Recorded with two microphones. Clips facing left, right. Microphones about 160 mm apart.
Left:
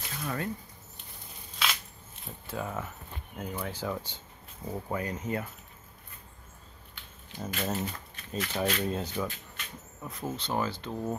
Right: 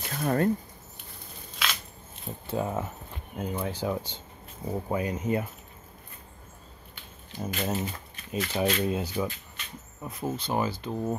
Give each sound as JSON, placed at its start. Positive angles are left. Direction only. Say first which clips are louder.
{"t": 0.1, "sound": "speech", "louder": "right 9 dB", "side_deg": -50}
{"t": 2.4, "sound": "speech", "louder": "right 6 dB", "side_deg": -25}
{"t": 7.3, "sound": "speech", "louder": "right 2 dB", "side_deg": -10}